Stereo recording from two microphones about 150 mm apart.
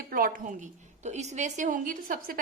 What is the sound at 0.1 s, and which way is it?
A woman's voice, 65° right (ahead or behind).